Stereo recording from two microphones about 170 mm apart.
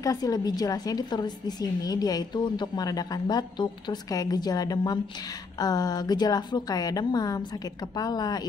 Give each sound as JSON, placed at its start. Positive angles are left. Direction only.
{"t": 0.0, "sound": "a woman's voice", "side_deg": 20}